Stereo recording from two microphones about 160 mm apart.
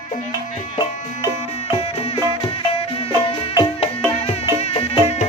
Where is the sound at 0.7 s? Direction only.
25° left (ahead or behind).